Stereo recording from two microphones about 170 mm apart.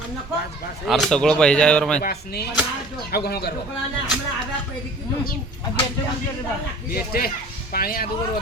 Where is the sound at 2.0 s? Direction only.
65° left (ahead or behind).